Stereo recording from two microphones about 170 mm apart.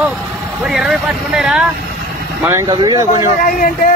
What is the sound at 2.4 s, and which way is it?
Speech, 20° right (ahead or behind).